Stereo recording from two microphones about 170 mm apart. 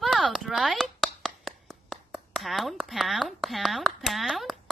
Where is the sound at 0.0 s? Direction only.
Centre (ahead or behind).